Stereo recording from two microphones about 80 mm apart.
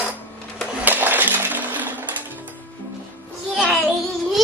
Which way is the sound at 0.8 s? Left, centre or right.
Right.